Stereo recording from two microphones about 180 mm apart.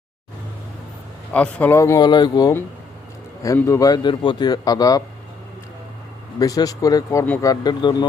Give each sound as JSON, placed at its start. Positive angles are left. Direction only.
{"t": 1.3, "sound": "a man's voice", "side_deg": 5}
{"t": 6.4, "sound": "a man's voice", "side_deg": 20}